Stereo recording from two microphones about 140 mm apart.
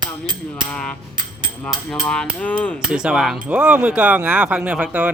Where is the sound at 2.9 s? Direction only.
5° right (ahead or behind).